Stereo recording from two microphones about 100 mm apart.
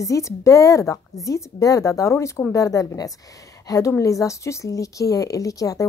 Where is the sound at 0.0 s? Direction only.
30° left (ahead or behind).